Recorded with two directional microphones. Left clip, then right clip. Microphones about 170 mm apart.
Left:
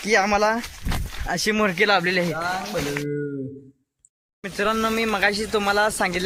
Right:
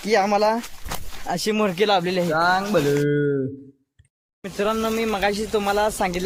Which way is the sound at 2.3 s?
45° right (ahead or behind).